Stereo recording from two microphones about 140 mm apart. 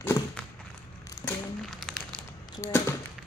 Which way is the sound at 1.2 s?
20° left (ahead or behind).